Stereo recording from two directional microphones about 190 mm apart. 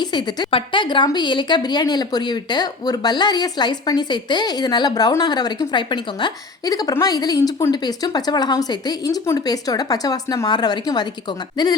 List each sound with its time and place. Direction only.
0.0 s a woman's voice: 20° left (ahead or behind)